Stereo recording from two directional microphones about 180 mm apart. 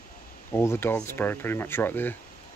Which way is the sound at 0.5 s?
15° left (ahead or behind).